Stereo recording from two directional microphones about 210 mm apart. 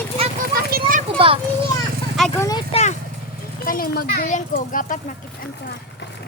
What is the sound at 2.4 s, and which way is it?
Speech, 15° left (ahead or behind).